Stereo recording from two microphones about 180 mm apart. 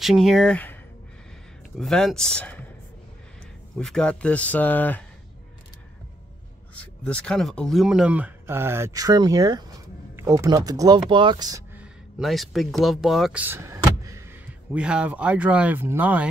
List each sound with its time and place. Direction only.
0.0 s speech: centre (ahead or behind)
1.8 s speech: 5° left (ahead or behind)
3.7 s speech: 5° left (ahead or behind)
6.8 s speech: 5° left (ahead or behind); by 11.6 s 20° right (ahead or behind)
11.8 s speech: centre (ahead or behind)